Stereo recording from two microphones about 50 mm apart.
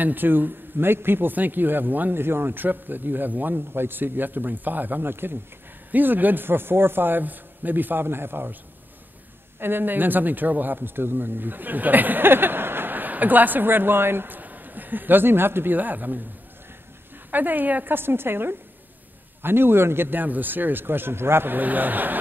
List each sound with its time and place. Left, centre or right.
0.0 s a man's voice: right
5.9 s a man's voice: right
9.6 s a man's voice: right
17.3 s a man's voice: right
21.5 s a man's voice: right